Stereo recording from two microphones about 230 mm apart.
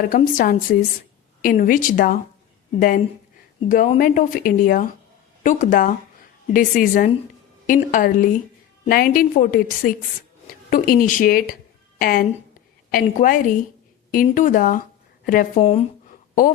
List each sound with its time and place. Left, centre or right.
0.1 s speech: left
15.6 s speech: left